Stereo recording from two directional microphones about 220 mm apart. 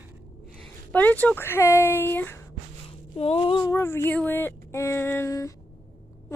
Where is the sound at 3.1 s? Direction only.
25° left (ahead or behind).